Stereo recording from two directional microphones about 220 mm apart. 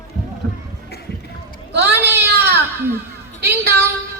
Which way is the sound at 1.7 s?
50° right (ahead or behind).